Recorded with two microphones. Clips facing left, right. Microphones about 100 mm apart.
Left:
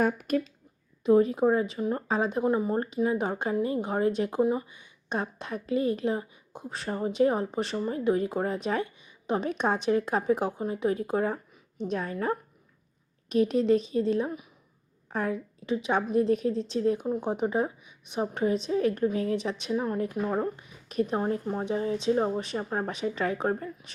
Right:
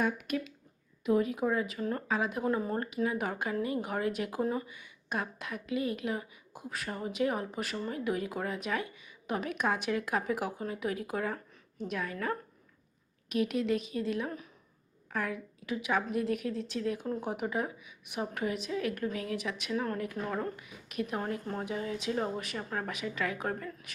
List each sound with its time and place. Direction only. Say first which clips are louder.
0.0 s speech: left 6 dB; 40° left (ahead or behind); by 2.8 s 20° left (ahead or behind)
2.8 s speech: left 5 dB; 30° left (ahead or behind)
17.0 s speech: left 6 dB; 20° left (ahead or behind)
21.4 s speech: left 5 dB; 20° left (ahead or behind)
21.7 s speech: left 9 dB; 30° left (ahead or behind)